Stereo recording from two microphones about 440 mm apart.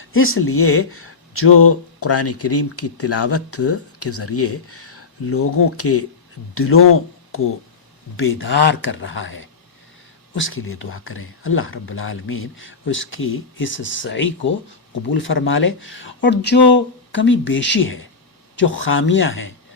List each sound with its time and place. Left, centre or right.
0.0 s speech: left